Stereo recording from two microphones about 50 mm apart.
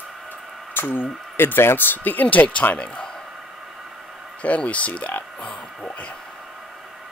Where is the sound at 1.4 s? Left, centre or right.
Left.